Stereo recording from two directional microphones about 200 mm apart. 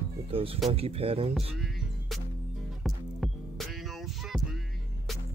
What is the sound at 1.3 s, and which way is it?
Music, centre (ahead or behind).